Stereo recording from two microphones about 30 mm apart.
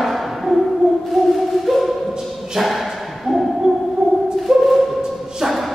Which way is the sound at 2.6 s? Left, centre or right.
Centre.